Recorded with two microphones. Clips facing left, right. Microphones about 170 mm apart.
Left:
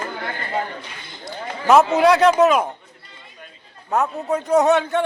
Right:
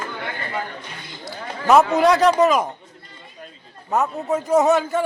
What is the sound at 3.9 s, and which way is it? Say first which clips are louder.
A man's voice: even; centre (ahead or behind).